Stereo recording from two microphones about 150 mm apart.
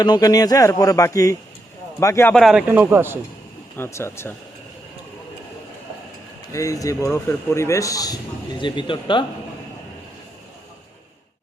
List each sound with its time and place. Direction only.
0.0 s a man's voice: 25° left (ahead or behind)
2.3 s a man's voice: centre (ahead or behind)
3.8 s speech: 20° left (ahead or behind)
6.5 s a man's voice: 20° left (ahead or behind)